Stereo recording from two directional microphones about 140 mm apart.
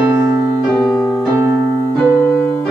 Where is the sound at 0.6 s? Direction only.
5° left (ahead or behind).